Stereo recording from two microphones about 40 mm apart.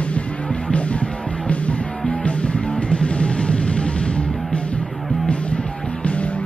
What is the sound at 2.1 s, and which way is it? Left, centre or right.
Music, left.